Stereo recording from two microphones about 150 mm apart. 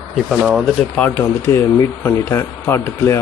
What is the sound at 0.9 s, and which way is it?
Speech, 10° left (ahead or behind).